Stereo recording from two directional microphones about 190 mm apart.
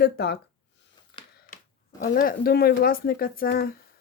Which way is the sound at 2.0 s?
45° left (ahead or behind).